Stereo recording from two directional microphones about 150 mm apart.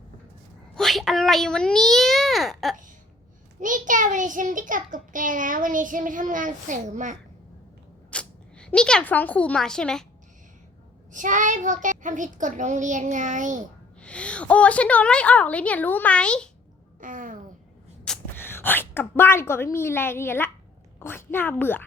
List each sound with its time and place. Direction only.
0.8 s a child's voice: centre (ahead or behind)
3.6 s a child's voice: 60° right (ahead or behind)
8.1 s speech: 5° left (ahead or behind)
11.1 s a child's voice: 60° right (ahead or behind)
14.0 s a woman's voice: 10° left (ahead or behind)
17.0 s a sound: 65° right (ahead or behind)
18.0 s a woman's voice: 10° left (ahead or behind)